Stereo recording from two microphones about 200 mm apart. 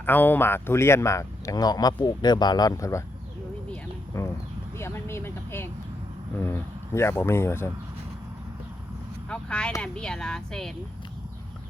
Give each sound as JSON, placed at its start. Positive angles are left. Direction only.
{"t": 0.0, "sound": "speech", "side_deg": 10}
{"t": 4.1, "sound": "speech", "side_deg": 15}
{"t": 4.8, "sound": "vehicle", "side_deg": 10}
{"t": 6.4, "sound": "speech", "side_deg": 10}
{"t": 9.3, "sound": "speech", "side_deg": 5}